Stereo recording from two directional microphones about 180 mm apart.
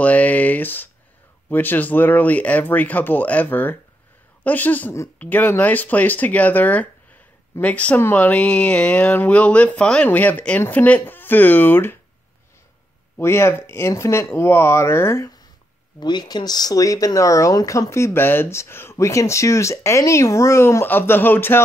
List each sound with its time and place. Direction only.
0.0 s speech: 10° left (ahead or behind)
13.2 s speech: 15° left (ahead or behind)